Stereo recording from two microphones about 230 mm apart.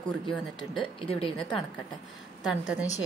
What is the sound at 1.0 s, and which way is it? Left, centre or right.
Speech, left.